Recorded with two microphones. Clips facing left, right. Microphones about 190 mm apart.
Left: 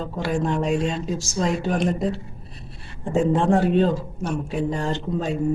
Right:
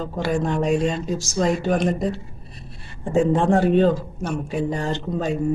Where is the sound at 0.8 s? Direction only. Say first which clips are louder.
Right 2 dB; 45° right (ahead or behind).